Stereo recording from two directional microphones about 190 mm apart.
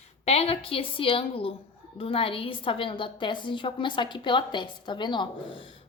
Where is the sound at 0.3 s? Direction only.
30° left (ahead or behind).